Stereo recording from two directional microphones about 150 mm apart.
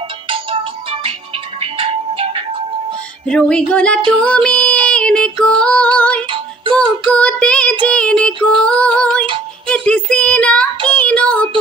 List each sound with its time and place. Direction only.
1.6 s music: 40° right (ahead or behind)
3.3 s female singing: 5° left (ahead or behind)
4.2 s child singing: 5° left (ahead or behind)
4.8 s music: 5° left (ahead or behind)
6.8 s child singing: 10° left (ahead or behind)
7.8 s female singing: 10° left (ahead or behind)
9.7 s a sound: 5° left (ahead or behind)
11.0 s child singing: 10° left (ahead or behind)